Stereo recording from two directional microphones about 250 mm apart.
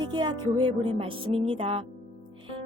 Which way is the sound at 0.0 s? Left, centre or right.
Centre.